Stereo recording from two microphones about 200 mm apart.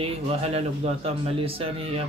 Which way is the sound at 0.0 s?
30° right (ahead or behind).